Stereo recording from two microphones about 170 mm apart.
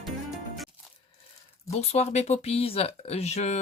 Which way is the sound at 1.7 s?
40° left (ahead or behind).